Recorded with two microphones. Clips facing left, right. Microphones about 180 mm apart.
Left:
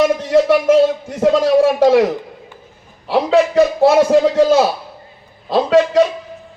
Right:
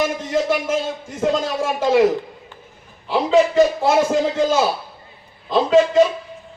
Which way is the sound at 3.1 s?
65° left (ahead or behind).